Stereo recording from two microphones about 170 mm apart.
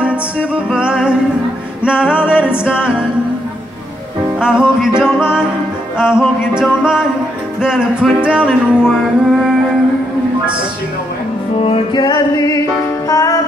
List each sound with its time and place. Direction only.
0.5 s music: 5° right (ahead or behind)
4.4 s music: 5° right (ahead or behind)
11.6 s music: 30° left (ahead or behind)